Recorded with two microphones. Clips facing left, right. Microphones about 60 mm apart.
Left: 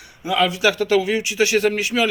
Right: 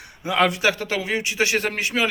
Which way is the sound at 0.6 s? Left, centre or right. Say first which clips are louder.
Left 5 dB; right.